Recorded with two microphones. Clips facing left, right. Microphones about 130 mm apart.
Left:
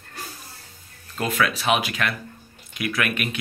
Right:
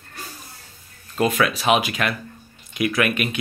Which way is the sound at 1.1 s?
20° right (ahead or behind).